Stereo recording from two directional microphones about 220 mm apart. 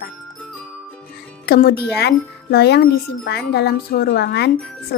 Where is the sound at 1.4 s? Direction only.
45° left (ahead or behind).